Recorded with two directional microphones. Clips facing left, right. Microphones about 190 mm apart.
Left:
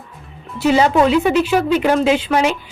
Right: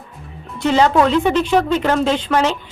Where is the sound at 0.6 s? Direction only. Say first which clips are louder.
Left 1 dB; 10° left (ahead or behind).